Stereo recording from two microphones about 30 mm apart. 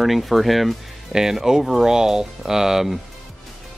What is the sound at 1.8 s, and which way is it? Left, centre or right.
Speech, right.